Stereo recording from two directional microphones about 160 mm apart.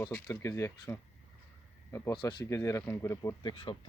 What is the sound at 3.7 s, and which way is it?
Speech, 30° left (ahead or behind).